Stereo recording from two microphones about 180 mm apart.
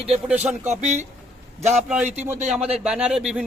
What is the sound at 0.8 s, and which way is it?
Speech, 40° right (ahead or behind).